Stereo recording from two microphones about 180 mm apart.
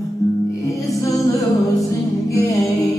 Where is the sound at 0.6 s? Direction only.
20° left (ahead or behind).